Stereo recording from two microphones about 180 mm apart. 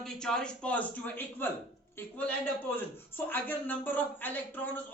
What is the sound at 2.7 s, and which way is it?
Speech, 10° left (ahead or behind).